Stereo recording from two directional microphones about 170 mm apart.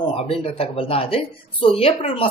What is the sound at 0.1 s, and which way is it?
A woman's voice, 35° left (ahead or behind).